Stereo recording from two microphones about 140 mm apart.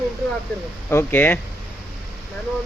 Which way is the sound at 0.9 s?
15° left (ahead or behind).